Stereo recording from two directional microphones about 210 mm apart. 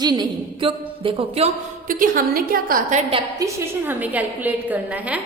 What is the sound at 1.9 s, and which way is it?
A woman's voice, 40° right (ahead or behind).